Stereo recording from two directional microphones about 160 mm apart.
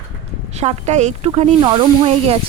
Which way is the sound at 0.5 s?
45° right (ahead or behind).